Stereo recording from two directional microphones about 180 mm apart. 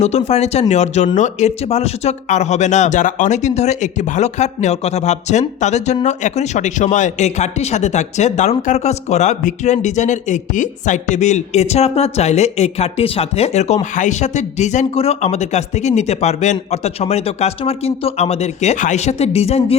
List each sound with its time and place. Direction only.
0.0 s speech: 35° left (ahead or behind)